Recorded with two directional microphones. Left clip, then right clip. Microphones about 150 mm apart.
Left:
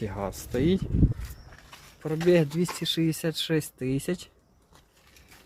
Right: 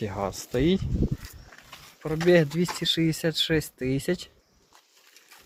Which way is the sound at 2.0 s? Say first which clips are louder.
Right 2 dB; 15° left (ahead or behind).